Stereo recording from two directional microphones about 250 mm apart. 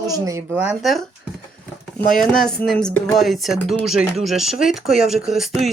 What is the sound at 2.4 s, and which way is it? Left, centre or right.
Speech, centre.